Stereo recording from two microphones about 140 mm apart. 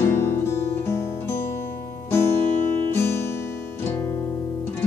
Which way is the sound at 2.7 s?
15° left (ahead or behind).